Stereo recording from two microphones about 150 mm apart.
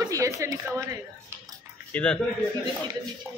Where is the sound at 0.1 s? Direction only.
20° right (ahead or behind).